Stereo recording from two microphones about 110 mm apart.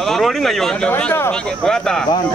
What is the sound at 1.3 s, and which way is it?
Speech, 5° left (ahead or behind).